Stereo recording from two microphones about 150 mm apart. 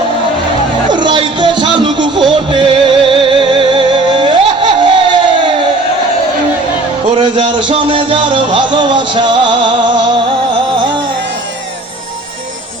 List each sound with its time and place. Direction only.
0.9 s music: 30° right (ahead or behind)
7.5 s music: 30° right (ahead or behind)